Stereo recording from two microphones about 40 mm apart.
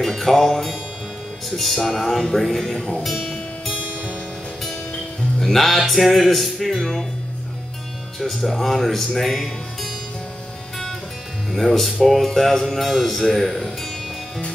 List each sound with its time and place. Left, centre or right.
0.0 s music: centre
3.8 s music: right
5.4 s speech: centre
8.2 s speech: centre
11.8 s speech: centre